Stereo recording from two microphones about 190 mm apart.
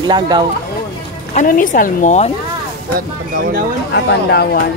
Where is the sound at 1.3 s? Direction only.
45° left (ahead or behind).